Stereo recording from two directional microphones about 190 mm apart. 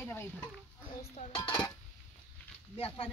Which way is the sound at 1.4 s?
20° left (ahead or behind).